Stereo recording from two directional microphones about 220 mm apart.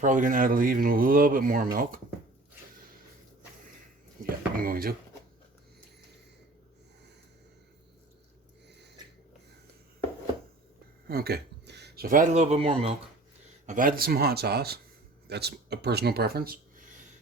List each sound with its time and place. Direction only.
0.0 s speech: 35° right (ahead or behind)
4.2 s drawer open or close: 40° right (ahead or behind)
11.1 s speech: 45° right (ahead or behind); by 12.9 s 25° right (ahead or behind)
13.7 s speech: 40° right (ahead or behind)